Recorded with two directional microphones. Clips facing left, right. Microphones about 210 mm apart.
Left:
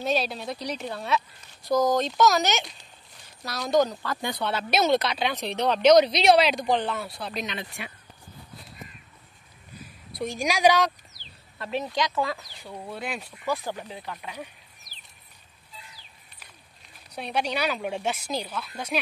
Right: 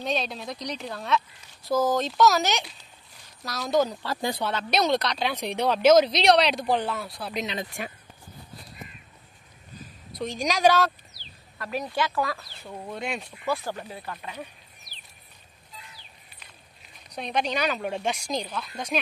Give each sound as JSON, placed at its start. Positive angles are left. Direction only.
{"t": 0.0, "sound": "speech", "side_deg": 5}
{"t": 4.0, "sound": "speech", "side_deg": -30}
{"t": 4.5, "sound": "speech", "side_deg": 5}
{"t": 5.3, "sound": "speech", "side_deg": -10}
{"t": 7.5, "sound": "speech", "side_deg": -45}
{"t": 9.8, "sound": "a sound", "side_deg": 10}
{"t": 11.5, "sound": "a sound", "side_deg": 25}
{"t": 12.0, "sound": "speech", "side_deg": 20}
{"t": 13.5, "sound": "speech", "side_deg": 15}
{"t": 14.9, "sound": "a sound", "side_deg": 90}
{"t": 17.1, "sound": "speech", "side_deg": 10}